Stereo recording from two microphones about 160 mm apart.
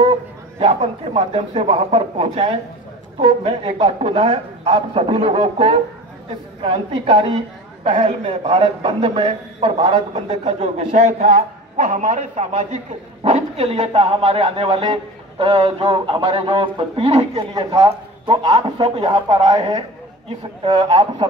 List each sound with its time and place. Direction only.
0.0 s a man's voice: 35° right (ahead or behind)
20.2 s a man's voice: 35° right (ahead or behind)